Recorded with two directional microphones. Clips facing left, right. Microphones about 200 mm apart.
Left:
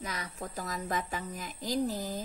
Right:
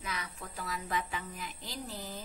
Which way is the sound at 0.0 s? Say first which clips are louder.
Left 3 dB; 40° left (ahead or behind).